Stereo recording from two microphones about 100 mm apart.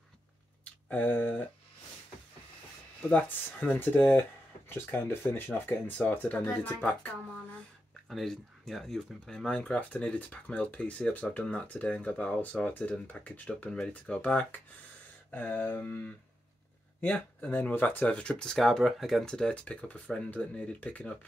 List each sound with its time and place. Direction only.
0.8 s speech: 15° left (ahead or behind)
3.1 s speech: 15° left (ahead or behind)
8.1 s speech: centre (ahead or behind)